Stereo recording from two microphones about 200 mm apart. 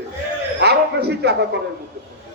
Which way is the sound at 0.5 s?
55° right (ahead or behind).